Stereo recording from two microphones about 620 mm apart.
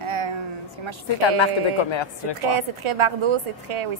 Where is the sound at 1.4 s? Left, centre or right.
Left.